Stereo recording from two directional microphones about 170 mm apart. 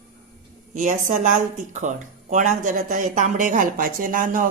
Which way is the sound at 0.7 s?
50° right (ahead or behind).